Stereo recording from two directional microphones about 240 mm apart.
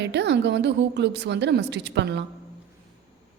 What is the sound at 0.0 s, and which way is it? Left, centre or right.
Speech, right.